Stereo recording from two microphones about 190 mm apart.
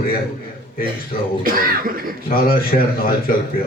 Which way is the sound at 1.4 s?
50° right (ahead or behind).